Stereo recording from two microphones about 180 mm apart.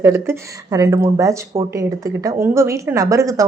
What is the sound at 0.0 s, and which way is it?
Speech, 15° right (ahead or behind).